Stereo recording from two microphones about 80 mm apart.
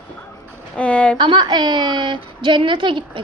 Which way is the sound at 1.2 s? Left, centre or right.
Right.